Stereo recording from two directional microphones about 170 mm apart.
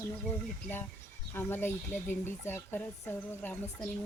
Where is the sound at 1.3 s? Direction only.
15° left (ahead or behind).